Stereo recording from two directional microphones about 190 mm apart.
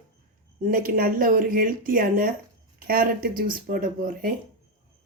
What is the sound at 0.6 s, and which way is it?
Speech, 50° right (ahead or behind).